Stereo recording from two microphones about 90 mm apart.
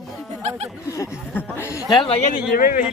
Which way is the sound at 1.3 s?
20° left (ahead or behind).